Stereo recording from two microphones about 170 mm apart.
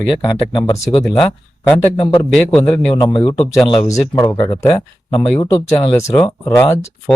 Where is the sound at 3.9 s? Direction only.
20° left (ahead or behind).